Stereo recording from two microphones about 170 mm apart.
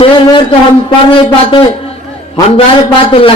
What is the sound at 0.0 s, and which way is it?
A man's voice, 30° left (ahead or behind).